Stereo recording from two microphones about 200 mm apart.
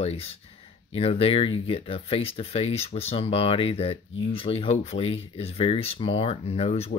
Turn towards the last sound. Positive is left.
turn(degrees=30)  # may be behind; listen again after turning